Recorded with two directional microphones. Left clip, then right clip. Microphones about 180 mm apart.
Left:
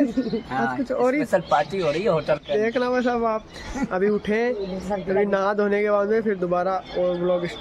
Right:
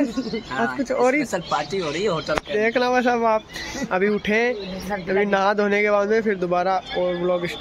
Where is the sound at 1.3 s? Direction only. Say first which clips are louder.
Left 3 dB; 60° left (ahead or behind).